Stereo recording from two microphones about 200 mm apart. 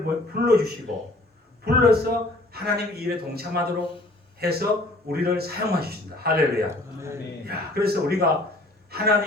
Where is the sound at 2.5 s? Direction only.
50° right (ahead or behind).